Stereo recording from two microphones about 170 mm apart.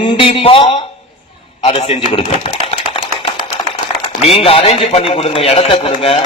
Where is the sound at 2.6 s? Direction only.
35° left (ahead or behind).